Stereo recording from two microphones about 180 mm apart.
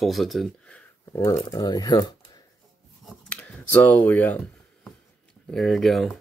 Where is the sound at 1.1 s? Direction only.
20° left (ahead or behind).